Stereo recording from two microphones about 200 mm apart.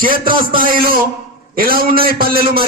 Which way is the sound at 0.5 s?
45° right (ahead or behind).